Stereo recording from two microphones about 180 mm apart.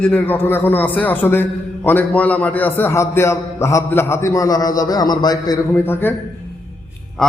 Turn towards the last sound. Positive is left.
turn(degrees=15)  # may be behind; listen again after turning